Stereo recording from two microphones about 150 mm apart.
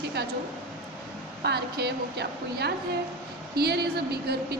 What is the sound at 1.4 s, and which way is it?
A woman's voice, 90° right.